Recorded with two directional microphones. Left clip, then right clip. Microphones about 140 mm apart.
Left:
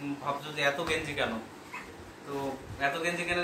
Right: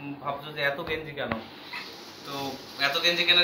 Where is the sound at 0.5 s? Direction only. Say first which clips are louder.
Even; 20° left (ahead or behind).